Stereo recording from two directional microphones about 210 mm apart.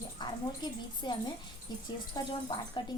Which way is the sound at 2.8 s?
20° left (ahead or behind).